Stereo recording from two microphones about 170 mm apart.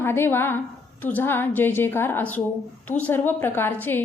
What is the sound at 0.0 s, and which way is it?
A woman's voice, 15° left (ahead or behind).